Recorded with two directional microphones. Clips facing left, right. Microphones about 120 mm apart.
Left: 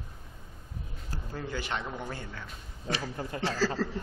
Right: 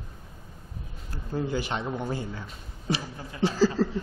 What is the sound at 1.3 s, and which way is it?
Speech, 15° right (ahead or behind).